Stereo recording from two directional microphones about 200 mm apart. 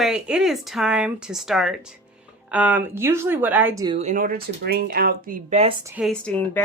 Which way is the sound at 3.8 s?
30° right (ahead or behind).